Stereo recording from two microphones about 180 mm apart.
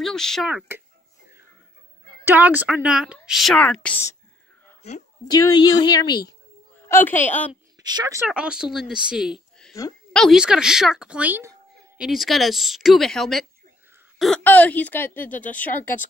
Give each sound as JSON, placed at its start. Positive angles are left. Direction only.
{"t": 0.0, "sound": "a woman's voice", "side_deg": 5}
{"t": 2.2, "sound": "a woman's voice", "side_deg": -10}
{"t": 5.3, "sound": "a woman's voice", "side_deg": 20}
{"t": 6.9, "sound": "a woman's voice", "side_deg": 10}
{"t": 7.8, "sound": "speech", "side_deg": -20}
{"t": 8.3, "sound": "a woman's voice", "side_deg": -5}